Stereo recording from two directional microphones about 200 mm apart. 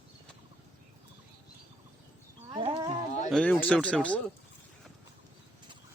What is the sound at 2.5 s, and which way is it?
Livestock, 25° right (ahead or behind).